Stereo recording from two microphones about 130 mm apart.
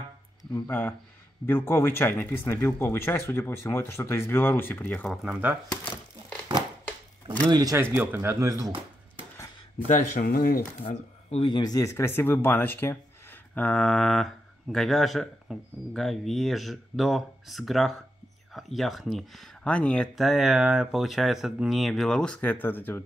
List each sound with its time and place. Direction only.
0.7 s speech: 15° left (ahead or behind)
5.1 s speech: 10° right (ahead or behind)
7.4 s speech: 30° right (ahead or behind)
8.1 s speech: 20° right (ahead or behind)
9.8 s speech: 85° left; by 11.4 s 60° left (ahead or behind)
11.4 s speech: 35° left (ahead or behind); by 23.0 s 15° left (ahead or behind)